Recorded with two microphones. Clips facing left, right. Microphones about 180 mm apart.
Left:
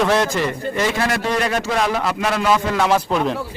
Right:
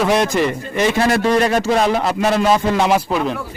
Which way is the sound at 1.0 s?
30° right (ahead or behind).